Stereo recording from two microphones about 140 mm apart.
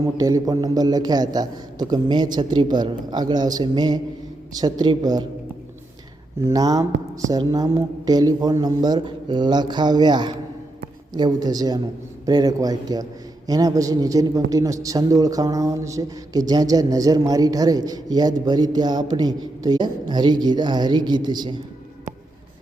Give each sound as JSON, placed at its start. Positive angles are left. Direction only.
{"t": 0.0, "sound": "a man's voice", "side_deg": -25}
{"t": 6.4, "sound": "a man's voice", "side_deg": -25}